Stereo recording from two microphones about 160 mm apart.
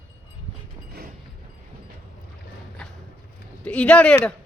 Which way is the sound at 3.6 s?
5° left (ahead or behind).